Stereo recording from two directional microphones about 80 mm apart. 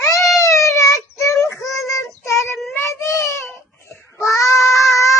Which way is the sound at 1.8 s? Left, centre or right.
Left.